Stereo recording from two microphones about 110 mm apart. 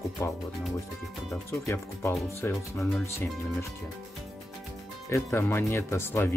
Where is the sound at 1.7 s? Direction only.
20° left (ahead or behind).